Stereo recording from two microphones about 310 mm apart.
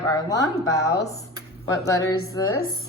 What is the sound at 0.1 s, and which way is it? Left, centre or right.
Speech, centre.